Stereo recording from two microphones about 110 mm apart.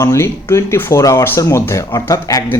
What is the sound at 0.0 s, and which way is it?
Speech, 25° left (ahead or behind).